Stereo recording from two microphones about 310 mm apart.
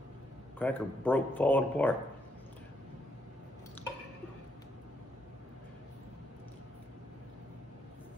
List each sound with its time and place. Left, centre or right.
0.6 s speech: centre